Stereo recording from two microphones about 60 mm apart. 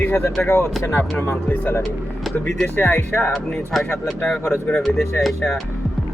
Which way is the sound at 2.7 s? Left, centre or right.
Left.